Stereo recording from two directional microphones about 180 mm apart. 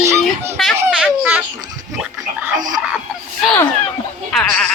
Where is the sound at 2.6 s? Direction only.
20° right (ahead or behind).